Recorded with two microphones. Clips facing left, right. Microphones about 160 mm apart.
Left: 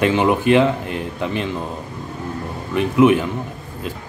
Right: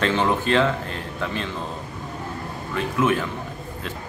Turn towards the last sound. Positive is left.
turn(degrees=15)  # may be behind; listen again after turning